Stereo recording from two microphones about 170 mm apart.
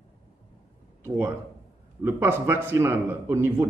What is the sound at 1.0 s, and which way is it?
A man's voice, 15° right (ahead or behind).